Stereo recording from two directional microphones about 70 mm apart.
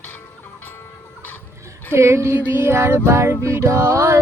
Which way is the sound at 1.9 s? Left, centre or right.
Right.